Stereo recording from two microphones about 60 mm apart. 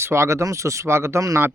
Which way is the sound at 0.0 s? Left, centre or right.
Right.